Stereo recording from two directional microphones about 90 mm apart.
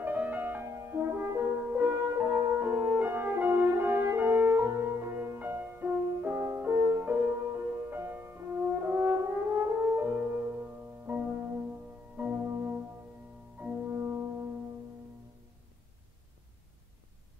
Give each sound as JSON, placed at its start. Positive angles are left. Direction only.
{"t": 0.0, "sound": "music", "side_deg": -20}
{"t": 1.7, "sound": "french horn", "side_deg": -20}
{"t": 12.2, "sound": "music", "side_deg": -20}
{"t": 13.9, "sound": "music", "side_deg": -25}